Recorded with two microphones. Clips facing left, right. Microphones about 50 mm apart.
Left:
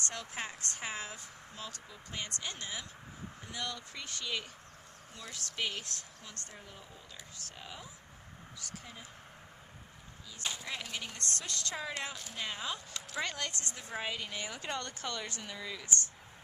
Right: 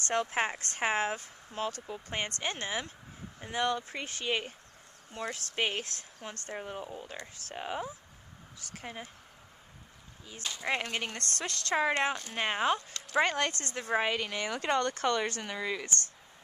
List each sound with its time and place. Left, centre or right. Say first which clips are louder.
0.1 s a woman's voice: right 11 dB; right
10.6 s a woman's voice: right 8 dB; right
11.7 s speech: right 14 dB; right
12.4 s a woman's voice: right 9 dB; right
13.2 s speech: right 9 dB; right
13.7 s speech: right 11 dB; right